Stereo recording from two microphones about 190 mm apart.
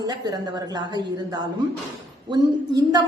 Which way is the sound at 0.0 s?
20° right (ahead or behind).